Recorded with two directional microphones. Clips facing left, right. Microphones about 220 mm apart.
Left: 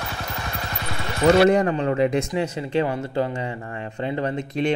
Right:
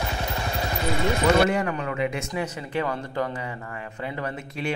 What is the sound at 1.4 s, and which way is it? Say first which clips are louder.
Speech: left 7 dB; 35° left (ahead or behind).